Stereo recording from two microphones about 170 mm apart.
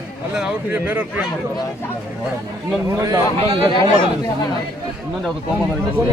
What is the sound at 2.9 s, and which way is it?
Speech, 20° right (ahead or behind).